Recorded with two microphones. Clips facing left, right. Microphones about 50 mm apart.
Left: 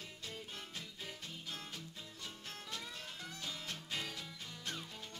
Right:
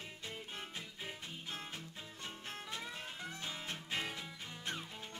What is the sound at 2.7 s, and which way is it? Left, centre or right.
Music, right.